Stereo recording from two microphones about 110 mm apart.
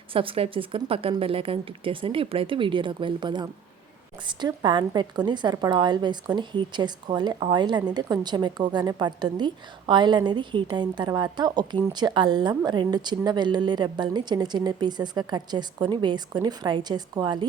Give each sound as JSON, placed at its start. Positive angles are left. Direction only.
{"t": 0.1, "sound": "a woman's voice", "side_deg": -55}